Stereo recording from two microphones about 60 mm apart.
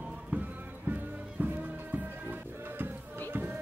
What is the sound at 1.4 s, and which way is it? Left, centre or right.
Music, right.